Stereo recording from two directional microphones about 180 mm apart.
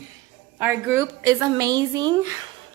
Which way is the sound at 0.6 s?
10° right (ahead or behind).